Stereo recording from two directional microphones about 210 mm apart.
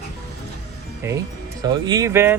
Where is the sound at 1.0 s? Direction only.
15° right (ahead or behind).